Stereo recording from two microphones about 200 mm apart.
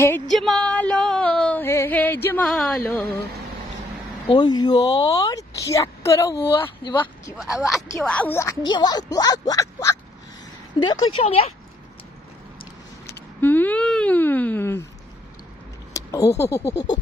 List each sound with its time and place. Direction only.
0.3 s music: centre (ahead or behind)
4.3 s a woman's voice: 20° left (ahead or behind)
7.3 s a woman's voice: 5° right (ahead or behind); by 11.5 s 30° left (ahead or behind)
12.5 s vehicle: 55° left (ahead or behind)
13.4 s a woman's voice: 10° left (ahead or behind)
15.9 s speech: 15° left (ahead or behind)